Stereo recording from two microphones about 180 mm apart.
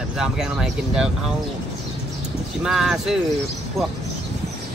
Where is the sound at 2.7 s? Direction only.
Centre (ahead or behind).